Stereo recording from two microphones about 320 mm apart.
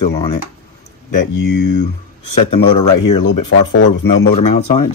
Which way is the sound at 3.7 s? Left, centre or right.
Left.